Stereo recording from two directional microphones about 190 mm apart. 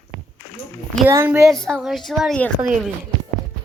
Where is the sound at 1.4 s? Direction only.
5° left (ahead or behind).